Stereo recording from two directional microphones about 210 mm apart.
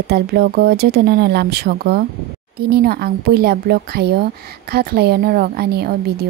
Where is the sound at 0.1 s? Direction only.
50° right (ahead or behind).